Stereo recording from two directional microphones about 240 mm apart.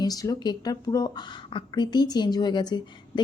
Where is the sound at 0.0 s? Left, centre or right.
Centre.